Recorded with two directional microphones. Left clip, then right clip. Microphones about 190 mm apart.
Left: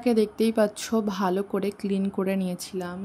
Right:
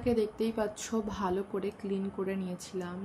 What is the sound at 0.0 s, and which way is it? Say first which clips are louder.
A woman's voice: left 7 dB; 60° left (ahead or behind).